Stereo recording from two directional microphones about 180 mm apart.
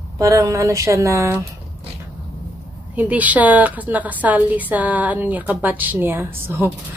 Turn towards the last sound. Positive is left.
turn(degrees=-15)  # may be behind; listen again after turning